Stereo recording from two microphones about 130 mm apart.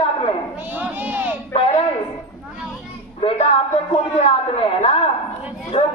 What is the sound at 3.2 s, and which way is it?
Speech, 45° left (ahead or behind).